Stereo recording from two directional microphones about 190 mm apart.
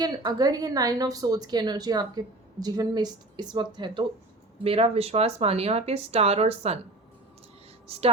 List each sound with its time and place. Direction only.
0.0 s a woman's voice: 20° right (ahead or behind)
7.9 s speech: 30° right (ahead or behind)